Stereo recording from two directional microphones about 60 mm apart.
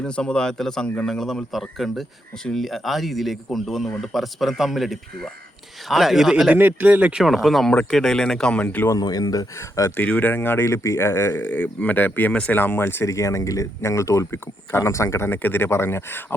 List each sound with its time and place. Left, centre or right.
0.0 s a man's voice: centre
6.5 s speech: right
7.2 s a man's voice: centre
9.0 s speech: left
10.1 s speech: left
11.4 s speech: left
13.1 s speech: left
14.3 s speech: left
14.8 s speech: left
15.3 s speech: left